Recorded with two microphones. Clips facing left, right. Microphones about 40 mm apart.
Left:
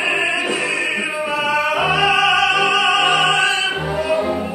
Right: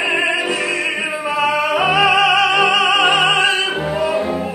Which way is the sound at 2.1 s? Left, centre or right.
Centre.